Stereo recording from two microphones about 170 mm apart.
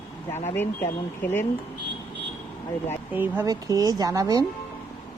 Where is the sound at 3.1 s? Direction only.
10° right (ahead or behind).